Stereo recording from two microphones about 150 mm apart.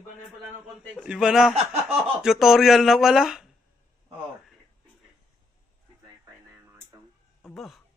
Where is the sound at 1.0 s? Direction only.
5° right (ahead or behind).